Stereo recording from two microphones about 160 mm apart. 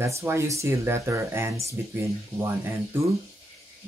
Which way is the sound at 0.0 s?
15° right (ahead or behind).